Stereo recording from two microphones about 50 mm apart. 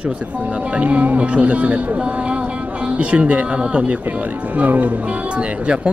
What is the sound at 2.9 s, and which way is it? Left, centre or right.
Speech, right.